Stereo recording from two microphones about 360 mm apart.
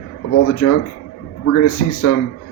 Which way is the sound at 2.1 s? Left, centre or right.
Left.